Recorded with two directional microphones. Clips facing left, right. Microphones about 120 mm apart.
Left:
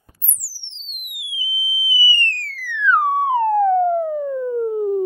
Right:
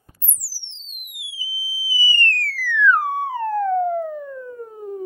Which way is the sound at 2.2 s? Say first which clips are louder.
Right 4 dB; 20° left (ahead or behind).